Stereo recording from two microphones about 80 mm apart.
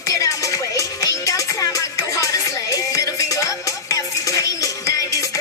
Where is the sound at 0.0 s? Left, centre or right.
Left.